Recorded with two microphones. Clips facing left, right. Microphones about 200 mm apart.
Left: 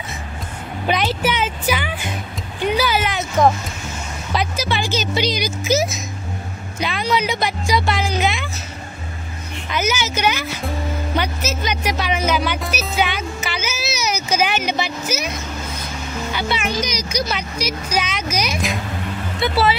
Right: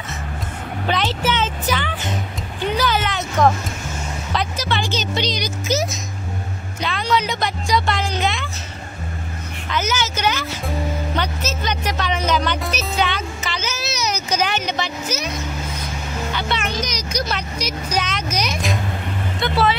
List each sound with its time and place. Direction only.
0.8 s music: 15° left (ahead or behind)
4.3 s speech: 10° left (ahead or behind)
9.7 s speech: 10° left (ahead or behind)
16.3 s speech: 5° left (ahead or behind)